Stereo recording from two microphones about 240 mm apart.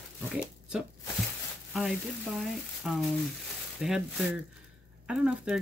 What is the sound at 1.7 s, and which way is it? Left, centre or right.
Speech, centre.